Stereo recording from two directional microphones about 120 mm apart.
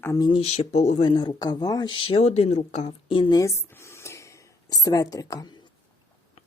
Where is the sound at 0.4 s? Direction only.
65° left (ahead or behind).